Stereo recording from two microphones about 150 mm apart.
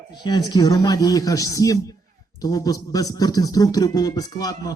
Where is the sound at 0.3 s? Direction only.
25° left (ahead or behind).